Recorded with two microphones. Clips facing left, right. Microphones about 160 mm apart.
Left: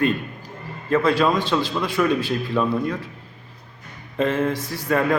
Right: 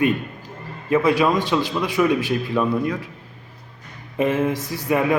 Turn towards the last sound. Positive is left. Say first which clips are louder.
# right 1 dB
turn(degrees=-15)  # may be behind; listen again after turning